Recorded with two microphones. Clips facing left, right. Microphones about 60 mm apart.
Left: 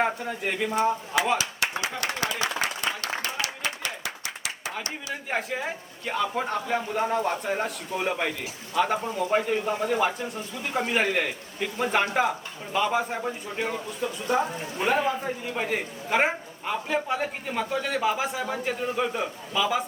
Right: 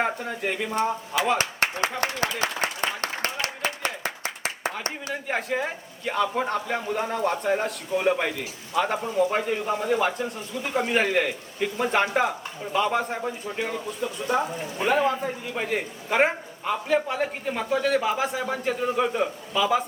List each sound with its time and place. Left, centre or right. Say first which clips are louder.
0.0 s a man's voice: even; centre
1.4 s a sound: right 3 dB; right
5.3 s a man's voice: right 2 dB; centre